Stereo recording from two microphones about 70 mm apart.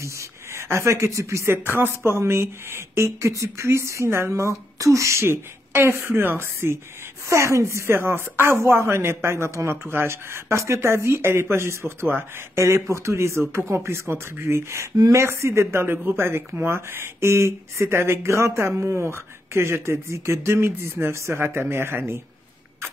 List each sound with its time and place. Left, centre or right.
0.0 s speech: right
12.5 s speech: right
15.0 s speech: right
15.2 s speech: right